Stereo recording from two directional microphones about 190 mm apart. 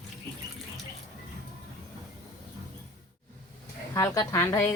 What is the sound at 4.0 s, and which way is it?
Speech, 15° left (ahead or behind).